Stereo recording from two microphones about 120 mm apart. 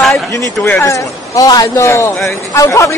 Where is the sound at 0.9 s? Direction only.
30° left (ahead or behind).